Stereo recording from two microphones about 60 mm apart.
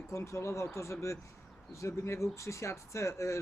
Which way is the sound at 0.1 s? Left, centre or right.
Left.